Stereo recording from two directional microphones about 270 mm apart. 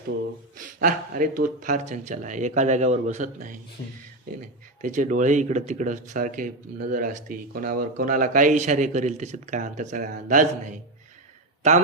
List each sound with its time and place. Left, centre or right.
0.5 s speech: right
4.8 s speech: right